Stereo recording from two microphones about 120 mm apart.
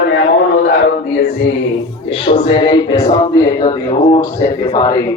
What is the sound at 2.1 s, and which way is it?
A man's voice, 45° left (ahead or behind).